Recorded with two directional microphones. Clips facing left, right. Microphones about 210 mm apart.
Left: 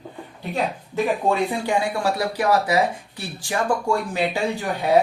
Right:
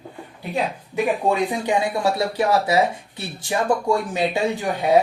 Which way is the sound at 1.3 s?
15° right (ahead or behind).